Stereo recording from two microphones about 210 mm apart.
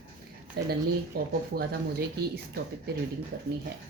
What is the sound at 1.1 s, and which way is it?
A woman's voice, 45° right (ahead or behind).